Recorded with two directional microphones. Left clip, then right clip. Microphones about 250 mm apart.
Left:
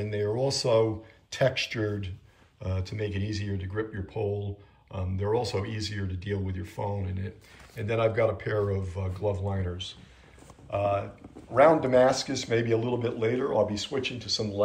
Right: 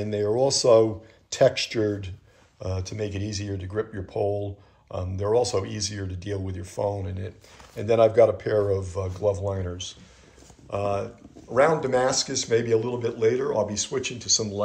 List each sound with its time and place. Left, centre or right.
0.0 s speech: centre